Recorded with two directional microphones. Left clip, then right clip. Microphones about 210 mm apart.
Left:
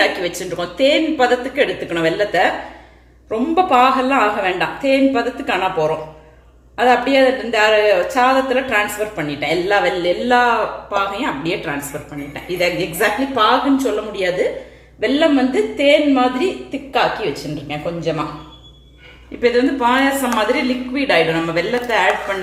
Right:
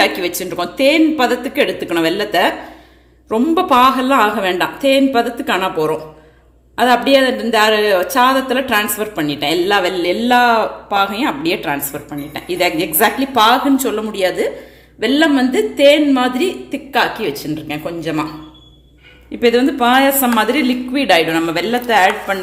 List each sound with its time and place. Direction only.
0.0 s a woman's voice: 45° right (ahead or behind)
15.0 s a woman's voice: 55° right (ahead or behind)
19.4 s a woman's voice: 50° right (ahead or behind)